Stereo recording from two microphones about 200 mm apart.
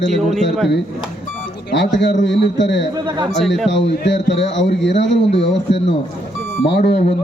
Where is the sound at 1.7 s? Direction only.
65° left (ahead or behind).